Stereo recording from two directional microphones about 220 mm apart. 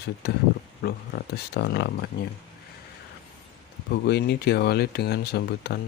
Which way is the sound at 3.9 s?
50° left (ahead or behind).